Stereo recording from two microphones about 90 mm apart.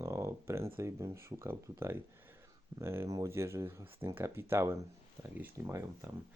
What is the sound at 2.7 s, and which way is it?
Speech, 30° right (ahead or behind).